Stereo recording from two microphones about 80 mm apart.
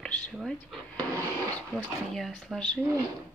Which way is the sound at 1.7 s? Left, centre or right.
Centre.